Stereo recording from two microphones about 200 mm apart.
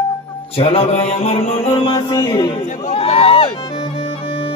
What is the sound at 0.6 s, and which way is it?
Speech, 30° left (ahead or behind).